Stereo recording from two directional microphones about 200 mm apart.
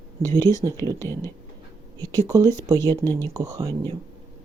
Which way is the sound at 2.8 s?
10° left (ahead or behind).